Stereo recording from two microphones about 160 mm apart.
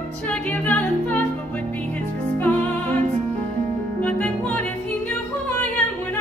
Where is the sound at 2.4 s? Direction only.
10° left (ahead or behind).